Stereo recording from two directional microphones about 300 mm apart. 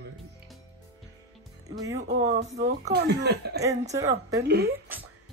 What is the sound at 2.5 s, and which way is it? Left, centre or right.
Speech, centre.